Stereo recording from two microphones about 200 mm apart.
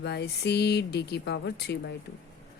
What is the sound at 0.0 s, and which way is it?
A woman's voice, 55° left (ahead or behind).